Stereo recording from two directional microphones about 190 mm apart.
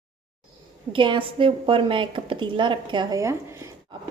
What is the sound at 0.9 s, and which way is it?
A woman's voice, 25° right (ahead or behind).